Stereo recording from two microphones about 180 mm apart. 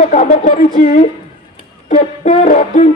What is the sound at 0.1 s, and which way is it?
Music, 45° left (ahead or behind).